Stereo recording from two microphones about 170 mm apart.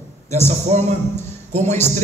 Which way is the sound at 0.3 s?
40° right (ahead or behind).